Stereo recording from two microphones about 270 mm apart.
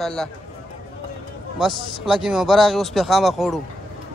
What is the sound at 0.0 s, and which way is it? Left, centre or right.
Speech, centre.